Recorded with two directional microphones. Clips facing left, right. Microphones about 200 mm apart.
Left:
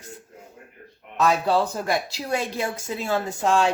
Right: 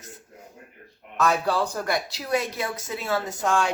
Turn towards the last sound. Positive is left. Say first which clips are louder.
# left 3 dB
turn(degrees=25)  # may be behind; listen again after turning